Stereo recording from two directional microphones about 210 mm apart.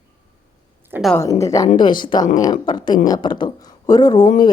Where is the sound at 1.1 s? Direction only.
15° left (ahead or behind).